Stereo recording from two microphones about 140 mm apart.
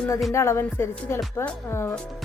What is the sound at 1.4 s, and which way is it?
Speech, 15° left (ahead or behind).